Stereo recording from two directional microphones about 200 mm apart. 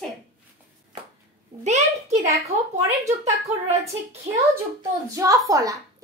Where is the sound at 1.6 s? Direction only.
35° right (ahead or behind).